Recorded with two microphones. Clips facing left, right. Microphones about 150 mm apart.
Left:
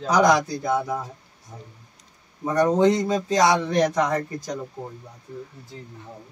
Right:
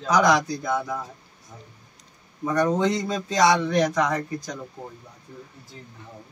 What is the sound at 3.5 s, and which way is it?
Speech, 30° left (ahead or behind).